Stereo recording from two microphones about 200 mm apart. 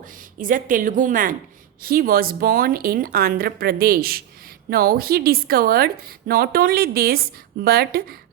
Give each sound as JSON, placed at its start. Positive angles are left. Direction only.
{"t": 0.3, "sound": "a woman's voice", "side_deg": -40}